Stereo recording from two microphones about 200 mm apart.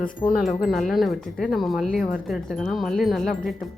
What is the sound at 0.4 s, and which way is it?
Speech, centre (ahead or behind).